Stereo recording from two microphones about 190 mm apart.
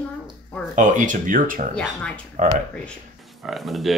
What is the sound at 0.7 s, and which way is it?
Speech, 40° right (ahead or behind).